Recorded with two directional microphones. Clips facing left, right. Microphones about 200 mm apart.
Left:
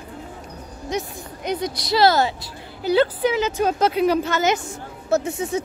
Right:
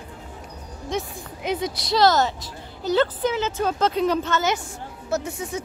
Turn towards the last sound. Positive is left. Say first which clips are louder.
# left 5 dB
turn(degrees=25)  # may be behind; listen again after turning